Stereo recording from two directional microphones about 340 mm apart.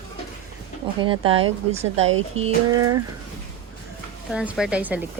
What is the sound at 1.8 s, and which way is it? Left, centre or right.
Speech, right.